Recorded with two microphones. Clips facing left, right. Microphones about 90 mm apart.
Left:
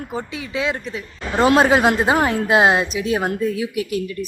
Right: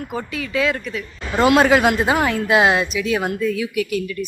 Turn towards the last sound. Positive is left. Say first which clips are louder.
# right 1 dB
turn(degrees=30)  # may be behind; listen again after turning